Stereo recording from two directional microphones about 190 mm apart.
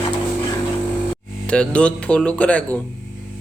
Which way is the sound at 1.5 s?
5° left (ahead or behind).